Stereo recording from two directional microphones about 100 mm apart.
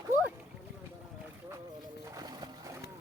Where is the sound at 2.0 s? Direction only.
35° right (ahead or behind).